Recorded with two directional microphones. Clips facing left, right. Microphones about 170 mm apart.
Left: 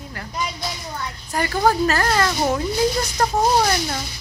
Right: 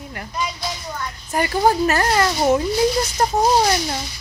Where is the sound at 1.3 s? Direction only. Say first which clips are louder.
Right 2 dB; 15° right (ahead or behind).